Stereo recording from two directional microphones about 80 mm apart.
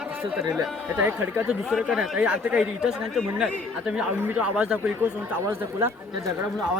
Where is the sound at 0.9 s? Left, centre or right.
Right.